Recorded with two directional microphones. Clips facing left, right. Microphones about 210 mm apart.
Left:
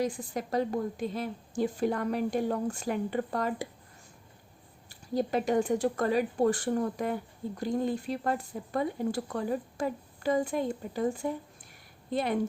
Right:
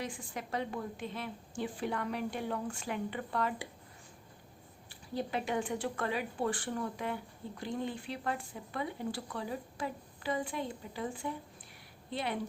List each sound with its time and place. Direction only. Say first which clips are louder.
0.0 s a woman's voice: left 9 dB; 40° left (ahead or behind)
4.9 s speech: left 7 dB; 40° left (ahead or behind)